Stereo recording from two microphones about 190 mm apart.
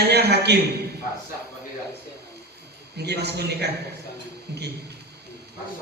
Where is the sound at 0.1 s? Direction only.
60° right (ahead or behind).